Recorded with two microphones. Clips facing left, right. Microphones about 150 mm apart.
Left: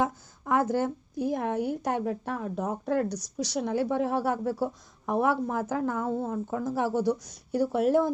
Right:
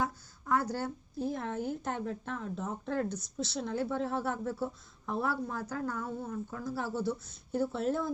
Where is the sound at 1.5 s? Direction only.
70° left (ahead or behind).